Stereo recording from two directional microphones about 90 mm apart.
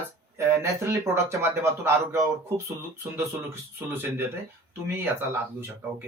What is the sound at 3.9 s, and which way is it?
A man's voice, 25° right (ahead or behind).